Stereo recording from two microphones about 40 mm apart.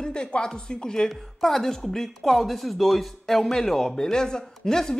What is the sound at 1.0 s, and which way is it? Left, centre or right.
Speech, centre.